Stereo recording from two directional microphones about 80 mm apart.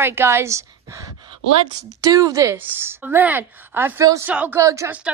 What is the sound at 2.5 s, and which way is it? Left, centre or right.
A woman's voice, right.